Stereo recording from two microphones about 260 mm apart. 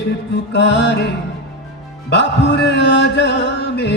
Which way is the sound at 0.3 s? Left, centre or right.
Left.